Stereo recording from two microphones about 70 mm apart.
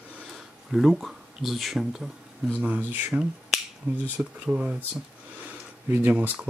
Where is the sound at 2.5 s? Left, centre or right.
Right.